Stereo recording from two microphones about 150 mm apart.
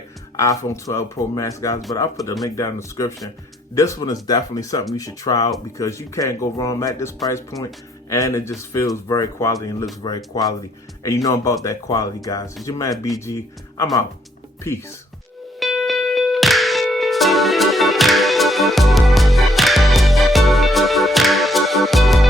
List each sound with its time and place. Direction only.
0.3 s speech: 20° left (ahead or behind)
15.6 s music: centre (ahead or behind)